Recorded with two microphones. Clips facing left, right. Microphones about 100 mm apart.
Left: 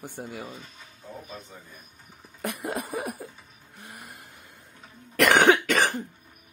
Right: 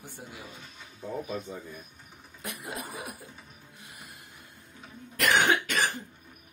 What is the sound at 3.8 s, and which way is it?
Music, 50° left (ahead or behind).